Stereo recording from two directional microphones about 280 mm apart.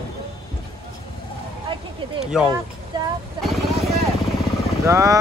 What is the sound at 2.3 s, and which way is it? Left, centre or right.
Music, centre.